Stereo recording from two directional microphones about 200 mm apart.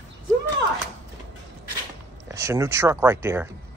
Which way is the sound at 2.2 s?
15° right (ahead or behind).